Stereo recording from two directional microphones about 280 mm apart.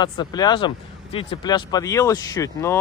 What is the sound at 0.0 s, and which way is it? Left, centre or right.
Speech, centre.